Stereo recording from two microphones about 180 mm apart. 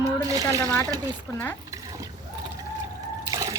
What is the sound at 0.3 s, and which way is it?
Speech, 20° right (ahead or behind).